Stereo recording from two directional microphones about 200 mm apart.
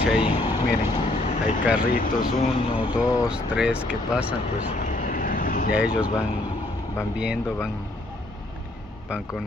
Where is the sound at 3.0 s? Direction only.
15° left (ahead or behind).